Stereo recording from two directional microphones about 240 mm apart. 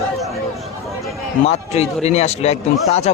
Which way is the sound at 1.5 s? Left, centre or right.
Left.